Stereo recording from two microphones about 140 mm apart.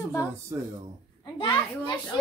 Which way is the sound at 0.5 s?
20° right (ahead or behind).